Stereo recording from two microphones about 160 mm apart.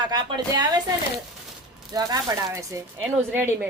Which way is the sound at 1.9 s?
25° right (ahead or behind).